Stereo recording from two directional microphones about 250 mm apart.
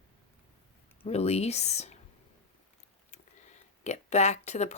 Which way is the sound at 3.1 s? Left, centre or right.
Left.